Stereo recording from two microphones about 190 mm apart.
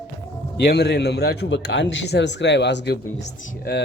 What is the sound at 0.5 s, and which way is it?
A man's voice, 60° left (ahead or behind).